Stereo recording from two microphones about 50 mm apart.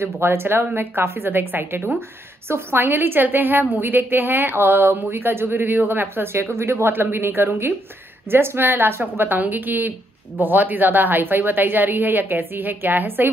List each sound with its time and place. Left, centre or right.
0.0 s a woman's voice: right
2.8 s a woman's voice: right